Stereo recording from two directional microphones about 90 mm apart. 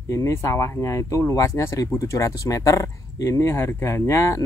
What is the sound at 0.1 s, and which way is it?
Speech, 35° left (ahead or behind).